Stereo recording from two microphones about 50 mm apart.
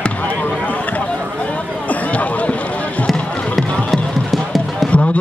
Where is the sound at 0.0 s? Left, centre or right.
Left.